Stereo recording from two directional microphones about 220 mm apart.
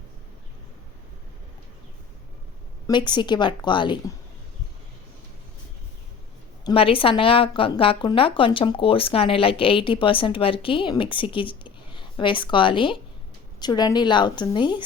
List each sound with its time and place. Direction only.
2.8 s a woman's voice: 20° left (ahead or behind)
6.7 s a woman's voice: 25° left (ahead or behind)